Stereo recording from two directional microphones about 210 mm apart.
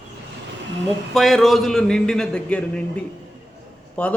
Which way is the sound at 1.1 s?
Centre (ahead or behind).